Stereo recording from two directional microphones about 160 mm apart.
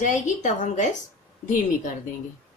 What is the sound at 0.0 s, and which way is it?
Speech, 50° left (ahead or behind).